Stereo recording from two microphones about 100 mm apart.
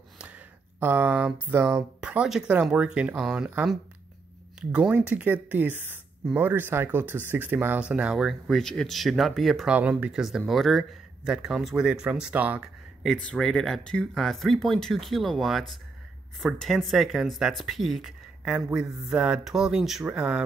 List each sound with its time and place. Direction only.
0.2 s a sound: 15° right (ahead or behind)
2.0 s speech: 10° right (ahead or behind)
4.6 s speech: 10° right (ahead or behind)
9.7 s speech: 15° right (ahead or behind)
13.0 s speech: centre (ahead or behind)
20.1 s speech: 15° right (ahead or behind)